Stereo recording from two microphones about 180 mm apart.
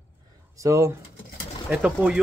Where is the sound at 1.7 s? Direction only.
5° right (ahead or behind).